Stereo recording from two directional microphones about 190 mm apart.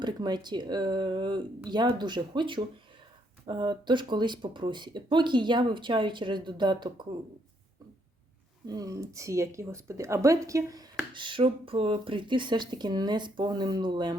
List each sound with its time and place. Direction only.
0.0 s speech: 20° right (ahead or behind)
8.6 s speech: 20° right (ahead or behind)